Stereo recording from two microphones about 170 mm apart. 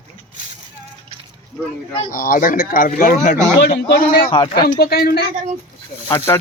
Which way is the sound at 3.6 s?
70° left (ahead or behind).